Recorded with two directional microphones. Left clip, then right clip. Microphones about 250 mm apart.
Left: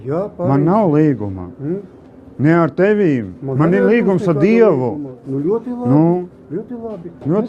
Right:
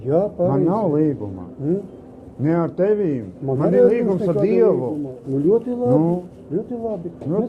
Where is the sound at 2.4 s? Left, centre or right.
Left.